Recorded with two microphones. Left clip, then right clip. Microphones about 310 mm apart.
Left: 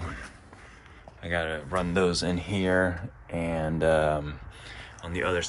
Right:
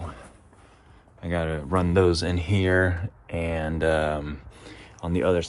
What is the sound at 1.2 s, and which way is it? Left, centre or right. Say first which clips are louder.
Speech: right 1 dB; right.